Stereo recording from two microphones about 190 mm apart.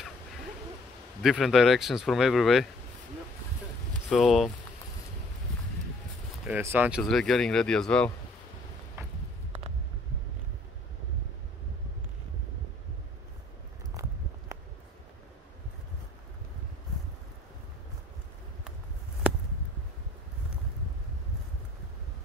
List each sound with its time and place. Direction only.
1.2 s speech: centre (ahead or behind)
4.1 s speech: centre (ahead or behind)
6.4 s speech: 10° right (ahead or behind)
7.0 s speech: centre (ahead or behind)
14.5 s a sound: 15° right (ahead or behind)